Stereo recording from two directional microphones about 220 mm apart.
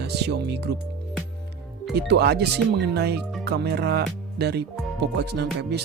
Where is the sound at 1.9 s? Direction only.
50° right (ahead or behind).